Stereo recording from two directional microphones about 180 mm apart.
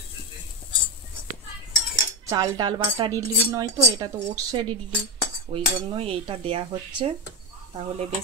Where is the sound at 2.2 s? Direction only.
20° right (ahead or behind).